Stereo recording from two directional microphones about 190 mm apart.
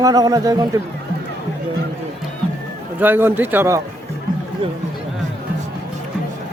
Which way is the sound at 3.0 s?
10° right (ahead or behind).